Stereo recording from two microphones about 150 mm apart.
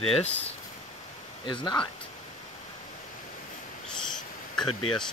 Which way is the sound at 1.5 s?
30° left (ahead or behind).